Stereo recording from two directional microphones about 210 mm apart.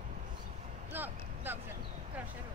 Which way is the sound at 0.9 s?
10° right (ahead or behind).